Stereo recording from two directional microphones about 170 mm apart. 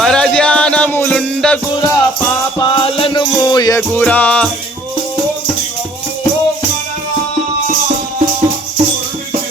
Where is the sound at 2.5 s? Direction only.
30° left (ahead or behind).